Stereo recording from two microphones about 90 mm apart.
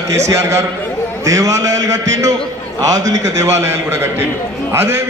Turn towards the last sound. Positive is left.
turn(degrees=-30)  # may be behind; listen again after turning